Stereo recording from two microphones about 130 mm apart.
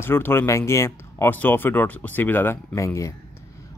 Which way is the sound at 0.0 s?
15° left (ahead or behind).